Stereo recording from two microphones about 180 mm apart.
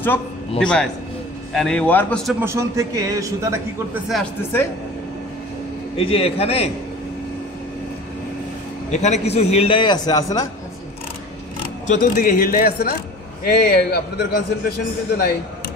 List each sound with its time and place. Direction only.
0.0 s a man's voice: 10° left (ahead or behind)
2.4 s speech: 15° right (ahead or behind)
3.9 s a man's voice: centre (ahead or behind)
5.9 s a man's voice: 30° left (ahead or behind)
8.9 s a man's voice: 40° left (ahead or behind); by 10.5 s 20° left (ahead or behind)
11.9 s a man's voice: 50° left (ahead or behind); by 14.4 s 65° left (ahead or behind)